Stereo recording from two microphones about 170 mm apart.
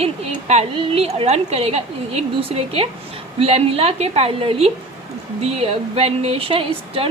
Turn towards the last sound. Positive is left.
turn(degrees=-35)  # may be behind; listen again after turning